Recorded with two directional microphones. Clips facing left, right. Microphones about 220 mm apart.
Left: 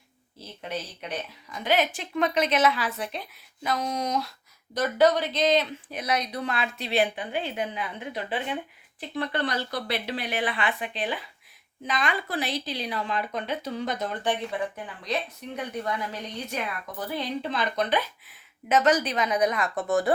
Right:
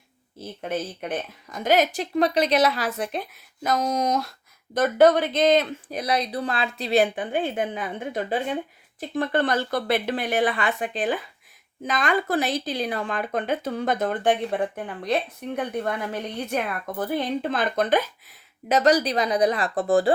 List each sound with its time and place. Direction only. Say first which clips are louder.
0.3 s speech: right 6 dB; 50° right (ahead or behind)
5.9 s speech: right 4 dB; 35° right (ahead or behind)